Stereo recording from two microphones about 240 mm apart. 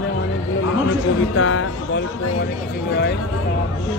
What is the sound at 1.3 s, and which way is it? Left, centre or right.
Speech, left.